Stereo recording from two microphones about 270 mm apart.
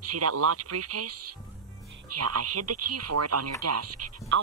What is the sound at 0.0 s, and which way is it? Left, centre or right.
Speech, right.